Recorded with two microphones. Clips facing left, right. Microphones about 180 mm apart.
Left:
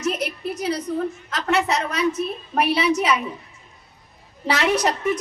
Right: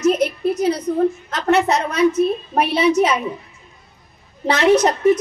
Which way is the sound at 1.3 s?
20° right (ahead or behind).